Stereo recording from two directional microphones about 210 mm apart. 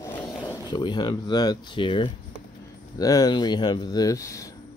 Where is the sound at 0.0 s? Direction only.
15° left (ahead or behind).